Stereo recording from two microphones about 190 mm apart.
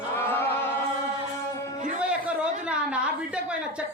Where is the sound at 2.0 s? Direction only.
5° right (ahead or behind).